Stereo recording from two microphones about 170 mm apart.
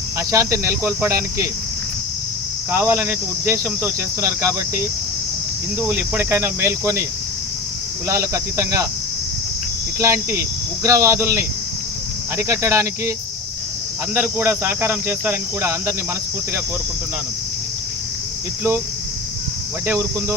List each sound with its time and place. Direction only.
0.2 s speech: 20° right (ahead or behind)
2.7 s speech: 15° right (ahead or behind)
8.0 s speech: 15° right (ahead or behind)
10.0 s speech: 15° right (ahead or behind)
19.9 s speech: 15° right (ahead or behind)